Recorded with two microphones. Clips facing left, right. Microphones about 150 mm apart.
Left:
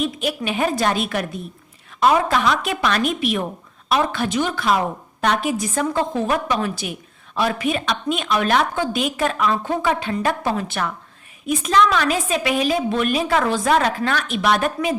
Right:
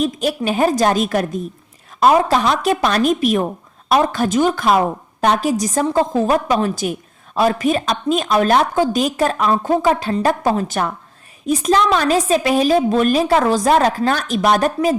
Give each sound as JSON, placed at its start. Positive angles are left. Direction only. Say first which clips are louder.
{"t": 0.0, "sound": "a woman's voice", "louder": "right 4 dB", "side_deg": -40}